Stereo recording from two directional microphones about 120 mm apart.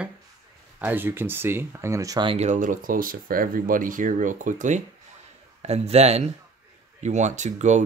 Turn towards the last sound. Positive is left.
turn(degrees=-80)